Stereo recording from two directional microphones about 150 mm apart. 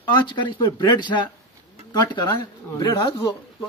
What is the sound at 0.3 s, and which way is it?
Speech, 30° left (ahead or behind).